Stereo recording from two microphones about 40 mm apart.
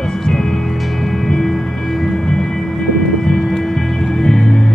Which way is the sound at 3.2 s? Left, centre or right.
Centre.